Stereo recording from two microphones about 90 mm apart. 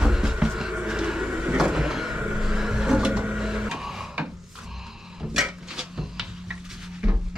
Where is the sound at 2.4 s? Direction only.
5° right (ahead or behind).